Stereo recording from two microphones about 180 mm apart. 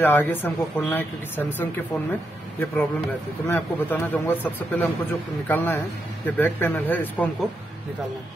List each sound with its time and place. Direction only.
0.0 s a man's voice: 10° left (ahead or behind)